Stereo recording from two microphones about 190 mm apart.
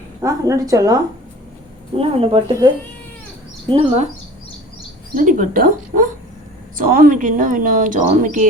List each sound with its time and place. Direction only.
0.2 s a woman's voice: 15° right (ahead or behind)
2.0 s speech: 30° right (ahead or behind)
5.1 s speech: 45° right (ahead or behind)